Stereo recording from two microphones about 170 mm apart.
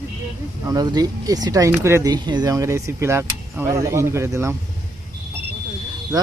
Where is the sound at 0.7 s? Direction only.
25° right (ahead or behind).